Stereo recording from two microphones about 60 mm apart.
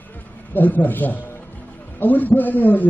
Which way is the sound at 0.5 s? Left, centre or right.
Left.